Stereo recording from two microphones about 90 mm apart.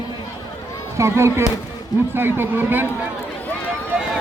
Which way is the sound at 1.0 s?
30° right (ahead or behind).